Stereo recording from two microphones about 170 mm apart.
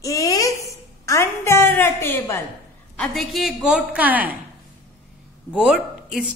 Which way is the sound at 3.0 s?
Centre (ahead or behind).